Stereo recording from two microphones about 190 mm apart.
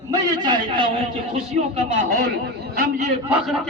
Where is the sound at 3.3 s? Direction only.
5° right (ahead or behind).